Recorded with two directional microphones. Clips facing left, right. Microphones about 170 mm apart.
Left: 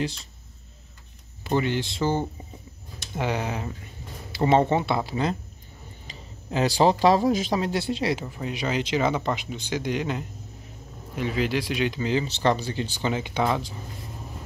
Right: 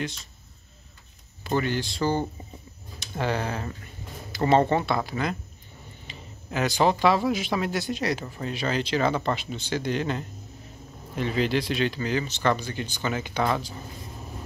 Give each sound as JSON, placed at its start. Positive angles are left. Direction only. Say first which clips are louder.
{"t": 1.4, "sound": "speech", "louder": "left 1 dB", "side_deg": 20}
{"t": 6.5, "sound": "speech", "louder": "left 2 dB", "side_deg": 30}